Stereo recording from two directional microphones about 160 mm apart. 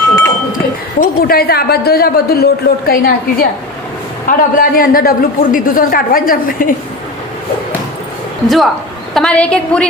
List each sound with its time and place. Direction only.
0.9 s a woman's voice: 70° left (ahead or behind)
8.4 s a woman's voice: centre (ahead or behind)